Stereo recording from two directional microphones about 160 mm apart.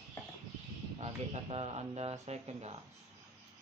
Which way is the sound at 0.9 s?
40° right (ahead or behind).